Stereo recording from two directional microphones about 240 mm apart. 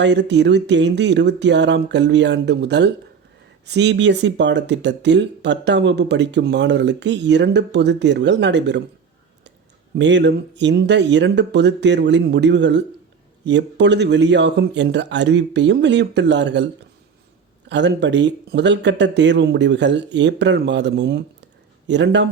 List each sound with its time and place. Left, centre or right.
0.0 s speech: right
10.0 s speech: right
17.7 s speech: right